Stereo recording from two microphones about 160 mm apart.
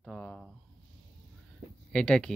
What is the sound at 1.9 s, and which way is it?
Speech, 5° left (ahead or behind).